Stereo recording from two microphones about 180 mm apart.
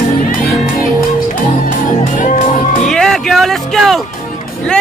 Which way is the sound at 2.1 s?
45° left (ahead or behind).